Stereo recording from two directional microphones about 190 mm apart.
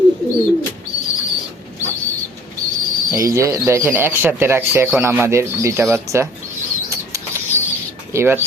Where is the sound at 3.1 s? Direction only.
15° right (ahead or behind).